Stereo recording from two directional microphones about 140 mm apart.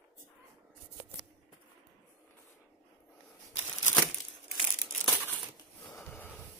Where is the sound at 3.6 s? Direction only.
15° left (ahead or behind).